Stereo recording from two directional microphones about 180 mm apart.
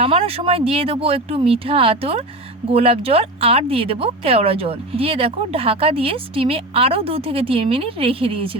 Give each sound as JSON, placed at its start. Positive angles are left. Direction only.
{"t": 0.0, "sound": "speech", "side_deg": -30}